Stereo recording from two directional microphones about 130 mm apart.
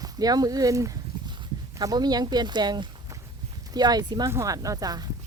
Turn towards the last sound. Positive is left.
turn(degrees=-30)  # may be behind; listen again after turning